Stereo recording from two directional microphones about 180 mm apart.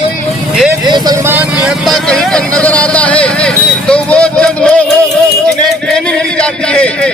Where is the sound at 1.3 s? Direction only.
5° right (ahead or behind).